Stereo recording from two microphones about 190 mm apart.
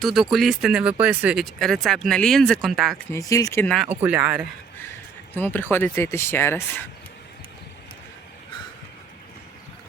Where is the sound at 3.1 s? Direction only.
15° left (ahead or behind).